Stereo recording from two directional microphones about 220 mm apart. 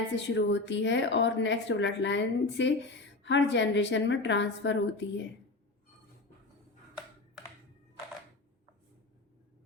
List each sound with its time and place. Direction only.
0.2 s a woman's voice: 55° left (ahead or behind)